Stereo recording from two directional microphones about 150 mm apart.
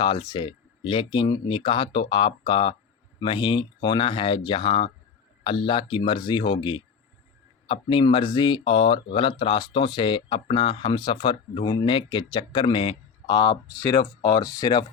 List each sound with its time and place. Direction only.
0.0 s speech: 35° left (ahead or behind)